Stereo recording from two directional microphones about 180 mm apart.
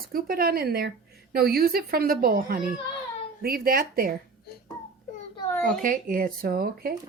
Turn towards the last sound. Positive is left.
turn(degrees=-55)  # may be behind; listen again after turning